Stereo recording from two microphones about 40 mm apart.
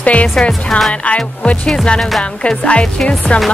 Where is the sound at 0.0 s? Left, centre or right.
Left.